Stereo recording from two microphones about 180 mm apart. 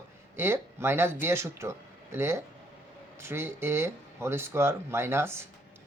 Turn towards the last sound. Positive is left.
turn(degrees=-15)  # may be behind; listen again after turning